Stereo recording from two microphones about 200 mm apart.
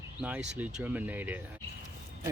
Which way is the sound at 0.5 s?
5° right (ahead or behind).